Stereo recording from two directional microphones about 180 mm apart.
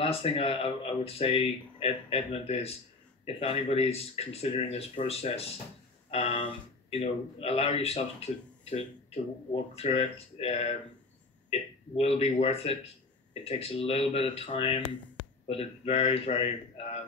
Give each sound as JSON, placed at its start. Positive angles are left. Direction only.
{"t": 0.0, "sound": "a man's voice", "side_deg": 30}